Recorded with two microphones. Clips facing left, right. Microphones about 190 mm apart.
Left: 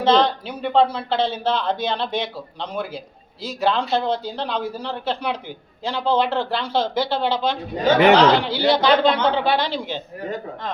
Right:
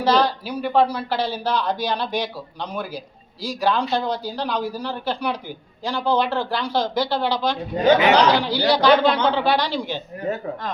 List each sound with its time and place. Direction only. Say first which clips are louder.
0.0 s speech: left 2 dB; 25° left (ahead or behind)
7.9 s speech: left 7 dB; 60° left (ahead or behind)
8.5 s speech: right 1 dB; 20° left (ahead or behind)